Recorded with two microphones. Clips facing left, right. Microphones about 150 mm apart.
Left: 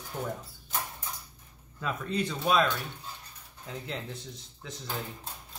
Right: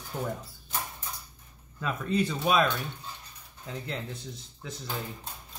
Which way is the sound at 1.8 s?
5° right (ahead or behind).